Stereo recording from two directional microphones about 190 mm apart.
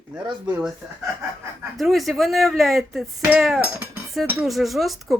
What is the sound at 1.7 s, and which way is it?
Speech, centre (ahead or behind).